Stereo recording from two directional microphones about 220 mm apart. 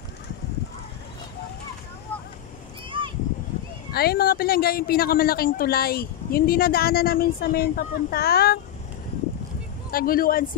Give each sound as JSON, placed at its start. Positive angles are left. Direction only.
{"t": 2.9, "sound": "a sound", "side_deg": -20}
{"t": 3.9, "sound": "a man's voice", "side_deg": 45}
{"t": 9.8, "sound": "speech", "side_deg": 40}